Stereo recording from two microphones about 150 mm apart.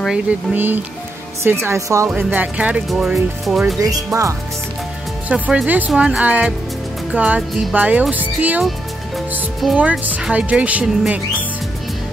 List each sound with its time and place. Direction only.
0.0 s speech: 5° right (ahead or behind)
2.0 s speech: 10° right (ahead or behind)
3.8 s speech: 20° right (ahead or behind)
5.3 s speech: 5° right (ahead or behind)